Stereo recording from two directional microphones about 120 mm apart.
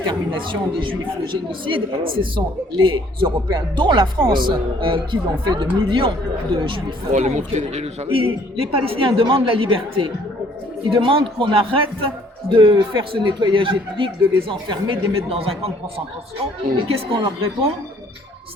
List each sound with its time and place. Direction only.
0.1 s a man's voice: 45° right (ahead or behind)
7.1 s a man's voice: 80° right; by 15.7 s 50° right (ahead or behind)
16.9 s a man's voice: 50° right (ahead or behind)